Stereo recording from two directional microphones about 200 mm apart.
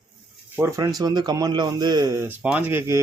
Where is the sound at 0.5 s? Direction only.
15° right (ahead or behind).